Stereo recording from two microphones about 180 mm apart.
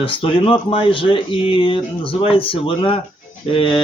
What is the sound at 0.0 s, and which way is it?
Speech, 30° left (ahead or behind).